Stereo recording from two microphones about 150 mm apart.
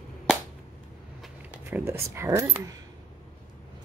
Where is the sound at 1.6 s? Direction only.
15° right (ahead or behind).